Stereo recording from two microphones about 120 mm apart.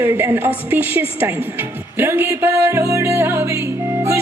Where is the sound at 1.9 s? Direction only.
20° right (ahead or behind).